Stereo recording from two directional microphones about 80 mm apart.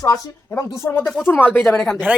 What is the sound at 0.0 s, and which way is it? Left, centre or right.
Speech, left.